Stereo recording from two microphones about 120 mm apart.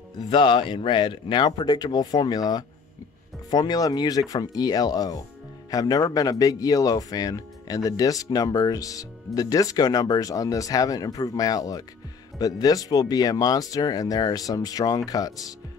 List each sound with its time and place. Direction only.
0.3 s speech: 45° left (ahead or behind)